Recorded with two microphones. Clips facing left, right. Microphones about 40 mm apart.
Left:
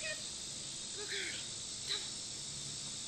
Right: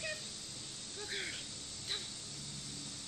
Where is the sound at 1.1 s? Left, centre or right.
Centre.